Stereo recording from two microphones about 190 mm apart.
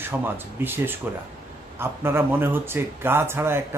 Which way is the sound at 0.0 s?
10° right (ahead or behind).